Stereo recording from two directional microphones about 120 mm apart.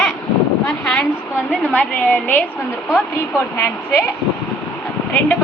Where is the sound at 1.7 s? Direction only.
15° left (ahead or behind).